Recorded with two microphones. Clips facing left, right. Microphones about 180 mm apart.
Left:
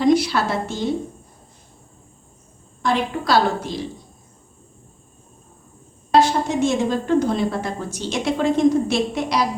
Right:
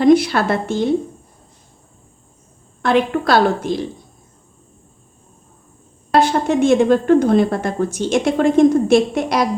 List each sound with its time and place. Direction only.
0.0 s a woman's voice: 55° right (ahead or behind)
2.8 s a woman's voice: 60° right (ahead or behind)
6.1 s a woman's voice: 60° right (ahead or behind)